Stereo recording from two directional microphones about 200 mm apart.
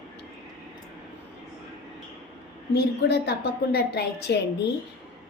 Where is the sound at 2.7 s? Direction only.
55° left (ahead or behind).